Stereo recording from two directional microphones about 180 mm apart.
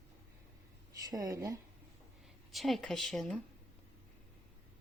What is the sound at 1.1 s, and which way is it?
Speech, 20° right (ahead or behind).